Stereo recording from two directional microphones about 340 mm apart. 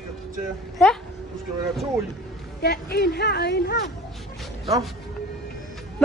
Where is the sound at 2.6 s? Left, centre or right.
Left.